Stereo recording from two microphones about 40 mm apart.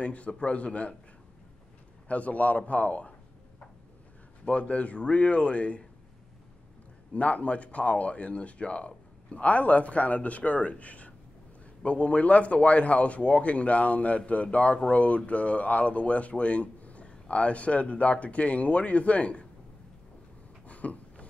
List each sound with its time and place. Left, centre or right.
0.0 s speech: left
2.0 s speech: left
7.2 s speech: left
20.6 s a sound: left